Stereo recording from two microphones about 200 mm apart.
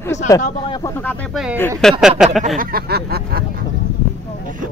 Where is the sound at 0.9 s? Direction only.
10° left (ahead or behind).